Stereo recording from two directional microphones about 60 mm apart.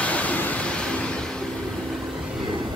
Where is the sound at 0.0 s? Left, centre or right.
Left.